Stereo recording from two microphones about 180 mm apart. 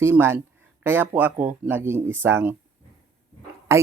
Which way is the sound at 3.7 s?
15° right (ahead or behind).